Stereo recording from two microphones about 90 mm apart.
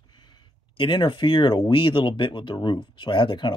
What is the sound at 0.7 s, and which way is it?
Speech, 65° left (ahead or behind).